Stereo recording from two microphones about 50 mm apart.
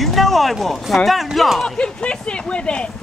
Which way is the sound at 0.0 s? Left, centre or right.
Centre.